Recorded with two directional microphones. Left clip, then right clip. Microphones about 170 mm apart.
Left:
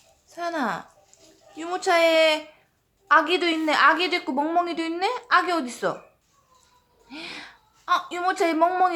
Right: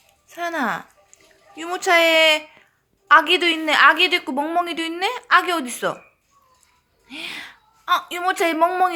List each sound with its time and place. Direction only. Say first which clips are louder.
0.3 s a woman's voice: right 3 dB; 15° right (ahead or behind)
7.1 s a woman's voice: right 5 dB; 10° right (ahead or behind)